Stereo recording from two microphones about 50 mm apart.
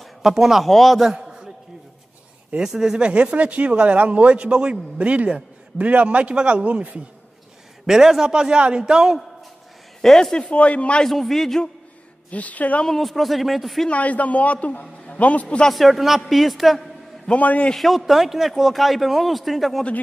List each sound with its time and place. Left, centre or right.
0.0 s speech: centre
1.0 s a sound: centre
2.6 s speech: centre; by 7.0 s right
7.8 s a man's voice: centre
10.0 s a man's voice: centre
10.4 s a man's voice: left
11.1 s a man's voice: centre
12.3 s a man's voice: left
12.8 s a man's voice: centre
13.8 s a man's voice: left
15.7 s a man's voice: centre
17.3 s a man's voice: left
17.7 s a man's voice: centre